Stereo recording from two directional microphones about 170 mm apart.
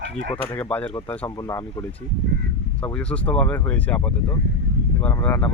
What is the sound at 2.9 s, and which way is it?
Speech, 10° left (ahead or behind).